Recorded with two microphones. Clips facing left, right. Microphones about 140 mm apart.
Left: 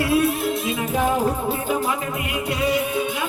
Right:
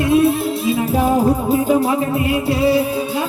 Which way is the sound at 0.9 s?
35° right (ahead or behind).